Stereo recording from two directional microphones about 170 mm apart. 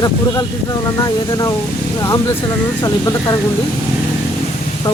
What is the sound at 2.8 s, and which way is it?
Speech, 25° left (ahead or behind).